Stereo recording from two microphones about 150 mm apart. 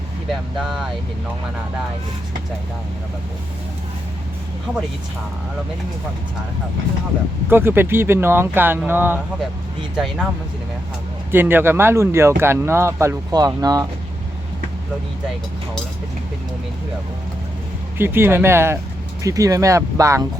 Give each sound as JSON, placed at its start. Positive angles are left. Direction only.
{"t": 0.6, "sound": "speech", "side_deg": 0}
{"t": 7.5, "sound": "speech", "side_deg": -15}
{"t": 9.9, "sound": "speech", "side_deg": 0}
{"t": 11.3, "sound": "speech", "side_deg": -15}
{"t": 17.9, "sound": "speech", "side_deg": -15}